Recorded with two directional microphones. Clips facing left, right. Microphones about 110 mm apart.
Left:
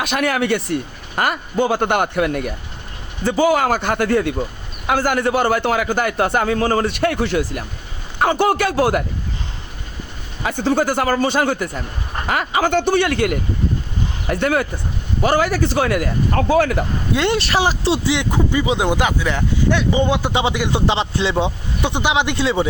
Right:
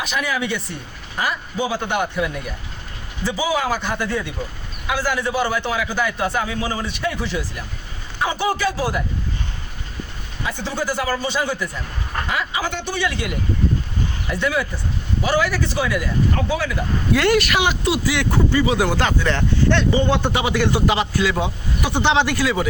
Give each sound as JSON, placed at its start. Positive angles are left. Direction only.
{"t": 0.0, "sound": "a man's voice", "side_deg": 65}
{"t": 10.4, "sound": "a man's voice", "side_deg": 50}
{"t": 17.2, "sound": "speech", "side_deg": 25}
{"t": 22.0, "sound": "speech", "side_deg": 15}